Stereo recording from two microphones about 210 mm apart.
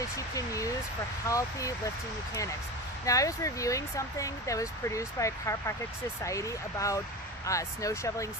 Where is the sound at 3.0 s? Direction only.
15° left (ahead or behind).